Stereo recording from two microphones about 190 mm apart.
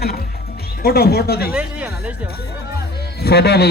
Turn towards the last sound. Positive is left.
turn(degrees=60)  # may be behind; listen again after turning